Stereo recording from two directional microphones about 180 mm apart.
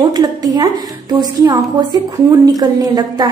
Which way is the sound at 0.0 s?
25° right (ahead or behind).